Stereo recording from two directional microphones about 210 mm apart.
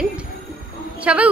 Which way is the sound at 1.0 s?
5° right (ahead or behind).